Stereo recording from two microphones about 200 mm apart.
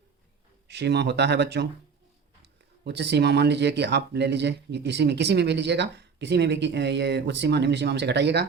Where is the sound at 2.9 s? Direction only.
55° right (ahead or behind).